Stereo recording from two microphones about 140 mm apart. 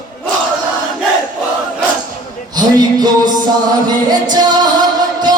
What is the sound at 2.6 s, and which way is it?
Music, 30° right (ahead or behind).